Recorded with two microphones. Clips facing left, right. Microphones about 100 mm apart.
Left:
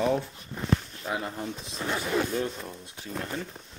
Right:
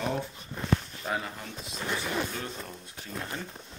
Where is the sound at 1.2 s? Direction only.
30° left (ahead or behind).